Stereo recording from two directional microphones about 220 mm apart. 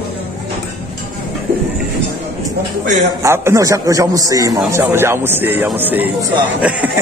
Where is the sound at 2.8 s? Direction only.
35° right (ahead or behind).